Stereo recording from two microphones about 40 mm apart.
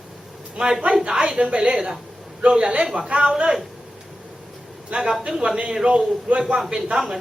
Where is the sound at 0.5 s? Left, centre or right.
Centre.